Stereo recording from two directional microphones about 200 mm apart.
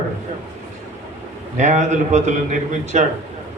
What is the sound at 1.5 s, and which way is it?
A man's voice, 35° right (ahead or behind).